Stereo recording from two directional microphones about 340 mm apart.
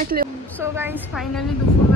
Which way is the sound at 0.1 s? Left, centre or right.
Right.